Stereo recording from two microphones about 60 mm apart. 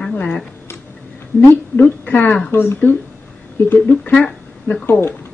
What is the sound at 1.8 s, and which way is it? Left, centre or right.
Speech, left.